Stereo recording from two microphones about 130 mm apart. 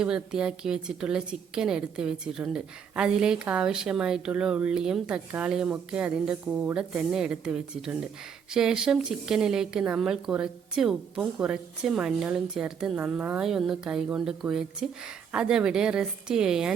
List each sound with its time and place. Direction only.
0.0 s a woman's voice: 5° right (ahead or behind)